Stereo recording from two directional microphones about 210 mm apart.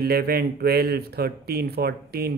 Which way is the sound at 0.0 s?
45° right (ahead or behind).